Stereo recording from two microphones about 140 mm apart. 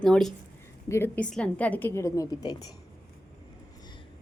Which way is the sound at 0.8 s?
15° left (ahead or behind).